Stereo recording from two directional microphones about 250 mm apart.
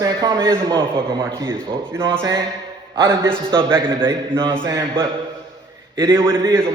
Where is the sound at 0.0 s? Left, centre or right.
Centre.